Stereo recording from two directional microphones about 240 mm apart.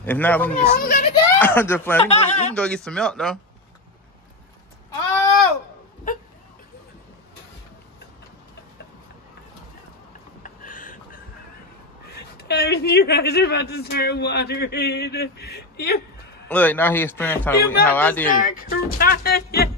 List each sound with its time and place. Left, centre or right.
0.0 s a man's voice: centre
0.7 s speech: left
1.1 s a man's voice: centre
2.0 s a man's voice: left
2.5 s speech: centre
10.4 s a sound: left
12.2 s speech: left
16.4 s a man's voice: centre
18.3 s speech: left